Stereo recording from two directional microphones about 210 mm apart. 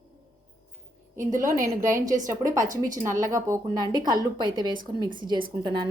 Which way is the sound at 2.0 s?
15° right (ahead or behind).